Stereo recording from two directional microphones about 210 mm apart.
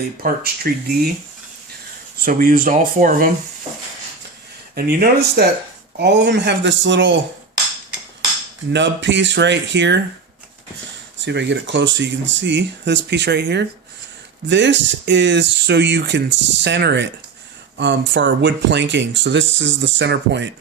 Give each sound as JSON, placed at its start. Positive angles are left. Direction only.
{"t": 0.2, "sound": "speech", "side_deg": -45}
{"t": 2.1, "sound": "speech", "side_deg": -45}
{"t": 4.7, "sound": "speech", "side_deg": -45}
{"t": 8.7, "sound": "speech", "side_deg": -60}
{"t": 11.3, "sound": "speech", "side_deg": -55}